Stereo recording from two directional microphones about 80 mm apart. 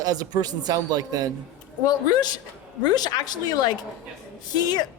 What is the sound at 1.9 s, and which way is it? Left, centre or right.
Speech, left.